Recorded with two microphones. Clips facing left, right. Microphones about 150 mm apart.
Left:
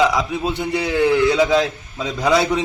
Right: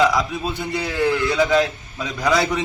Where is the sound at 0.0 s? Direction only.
15° left (ahead or behind).